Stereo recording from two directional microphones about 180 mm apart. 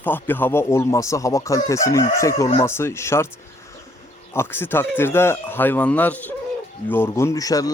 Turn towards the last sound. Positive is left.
turn(degrees=20)  # may be behind; listen again after turning